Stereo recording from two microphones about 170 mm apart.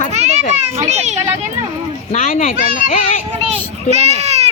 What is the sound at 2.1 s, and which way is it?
Speech, 50° left (ahead or behind).